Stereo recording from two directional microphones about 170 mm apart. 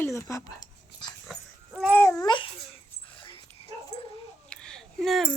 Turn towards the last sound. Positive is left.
turn(degrees=0)  # may be behind; listen again after turning